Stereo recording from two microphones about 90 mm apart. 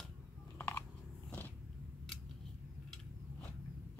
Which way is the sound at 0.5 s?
25° left (ahead or behind).